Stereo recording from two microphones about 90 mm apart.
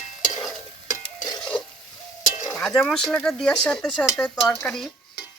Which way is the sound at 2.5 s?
5° left (ahead or behind).